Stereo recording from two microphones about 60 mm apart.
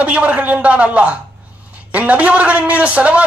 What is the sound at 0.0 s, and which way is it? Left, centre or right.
A man's voice, right.